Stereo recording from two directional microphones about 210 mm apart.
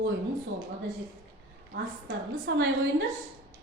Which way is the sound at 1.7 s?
50° right (ahead or behind).